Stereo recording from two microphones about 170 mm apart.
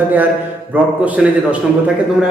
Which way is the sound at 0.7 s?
10° right (ahead or behind).